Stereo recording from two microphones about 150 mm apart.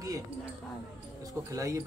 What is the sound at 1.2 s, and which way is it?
Speech, 20° right (ahead or behind).